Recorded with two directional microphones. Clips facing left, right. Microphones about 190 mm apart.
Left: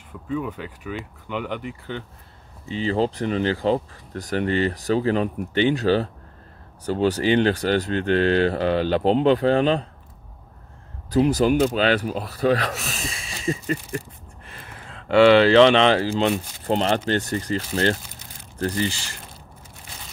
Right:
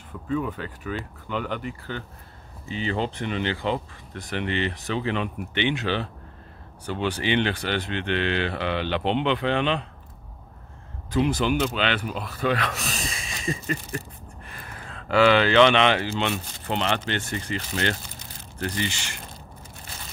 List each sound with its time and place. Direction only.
0.3 s speech: 10° left (ahead or behind)
2.7 s speech: 35° left (ahead or behind)
11.1 s speech: 40° left (ahead or behind)
12.7 s speech: centre (ahead or behind)
13.5 s speech: 30° left (ahead or behind)